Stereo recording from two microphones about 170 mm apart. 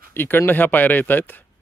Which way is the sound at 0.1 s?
10° left (ahead or behind).